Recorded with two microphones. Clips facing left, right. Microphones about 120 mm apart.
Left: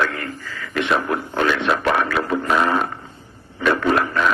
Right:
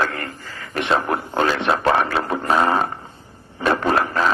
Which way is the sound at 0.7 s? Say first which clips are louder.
Even; 30° right (ahead or behind).